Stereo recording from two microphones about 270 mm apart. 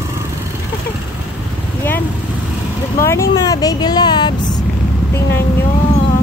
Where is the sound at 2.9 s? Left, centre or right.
Centre.